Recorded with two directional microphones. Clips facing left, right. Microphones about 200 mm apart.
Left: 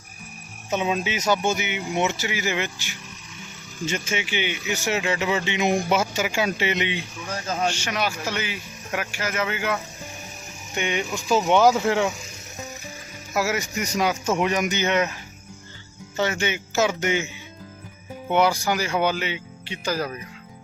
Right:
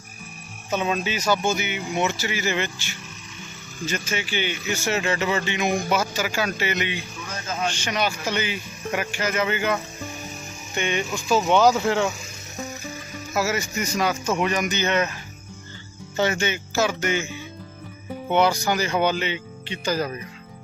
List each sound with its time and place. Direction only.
0.7 s speech: 15° left (ahead or behind)
7.7 s speech: 5° left (ahead or behind)
10.8 s speech: 15° left (ahead or behind)
13.3 s speech: 15° left (ahead or behind)
16.1 s speech: 5° right (ahead or behind)
16.4 s speech: 15° left (ahead or behind)
18.3 s speech: 10° left (ahead or behind)